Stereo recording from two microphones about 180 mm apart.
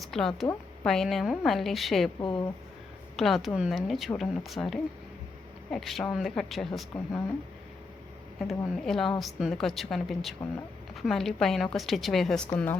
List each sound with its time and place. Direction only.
0.0 s a woman's voice: centre (ahead or behind)
2.2 s speech: 25° left (ahead or behind)
3.2 s a woman's voice: centre (ahead or behind)
8.4 s a woman's voice: centre (ahead or behind)